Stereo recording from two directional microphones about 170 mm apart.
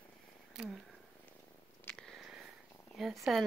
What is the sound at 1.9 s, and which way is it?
Purr, 5° left (ahead or behind).